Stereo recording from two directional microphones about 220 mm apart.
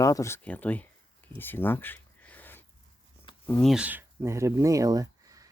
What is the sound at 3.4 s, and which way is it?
Speech, 5° left (ahead or behind).